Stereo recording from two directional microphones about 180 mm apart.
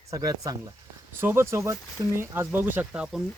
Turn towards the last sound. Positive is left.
turn(degrees=-5)  # may be behind; listen again after turning